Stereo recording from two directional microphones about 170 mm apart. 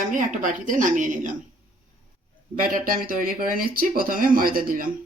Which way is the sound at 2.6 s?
55° right (ahead or behind).